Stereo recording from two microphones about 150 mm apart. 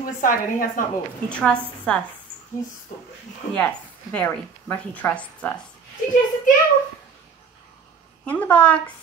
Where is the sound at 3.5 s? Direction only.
10° left (ahead or behind).